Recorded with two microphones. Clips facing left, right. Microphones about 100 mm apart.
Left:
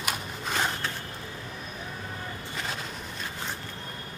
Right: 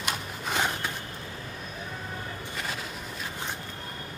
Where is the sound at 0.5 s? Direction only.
15° right (ahead or behind).